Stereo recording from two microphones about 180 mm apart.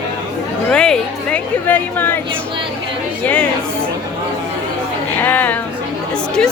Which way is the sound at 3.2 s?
10° left (ahead or behind).